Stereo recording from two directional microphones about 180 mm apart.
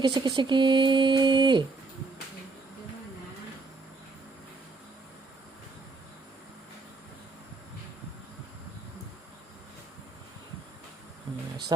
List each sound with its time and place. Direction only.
0.0 s speech: 25° right (ahead or behind)